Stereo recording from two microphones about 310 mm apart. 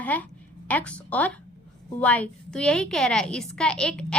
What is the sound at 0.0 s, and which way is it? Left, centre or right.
A woman's voice, centre.